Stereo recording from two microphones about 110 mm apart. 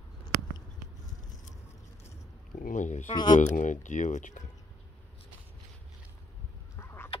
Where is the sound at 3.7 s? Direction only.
90° left.